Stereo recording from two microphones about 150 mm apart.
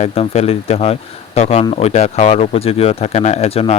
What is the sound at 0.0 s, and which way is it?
Speech, 40° left (ahead or behind).